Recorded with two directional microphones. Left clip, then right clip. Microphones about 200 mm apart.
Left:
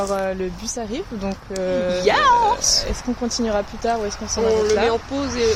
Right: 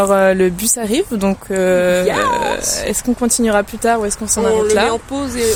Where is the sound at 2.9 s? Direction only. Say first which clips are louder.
Right 7 dB; 60° right (ahead or behind).